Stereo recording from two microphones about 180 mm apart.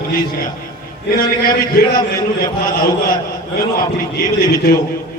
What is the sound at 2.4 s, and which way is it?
A man's voice, 55° left (ahead or behind).